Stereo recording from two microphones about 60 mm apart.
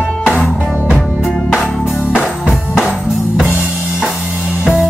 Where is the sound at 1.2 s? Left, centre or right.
Centre.